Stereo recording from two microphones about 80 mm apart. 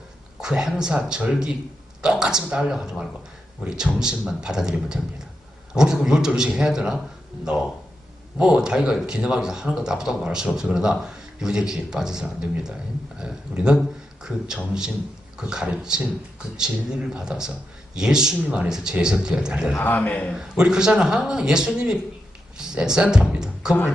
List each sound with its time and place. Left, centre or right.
0.3 s speech: centre
19.7 s a man's voice: left
20.3 s speech: centre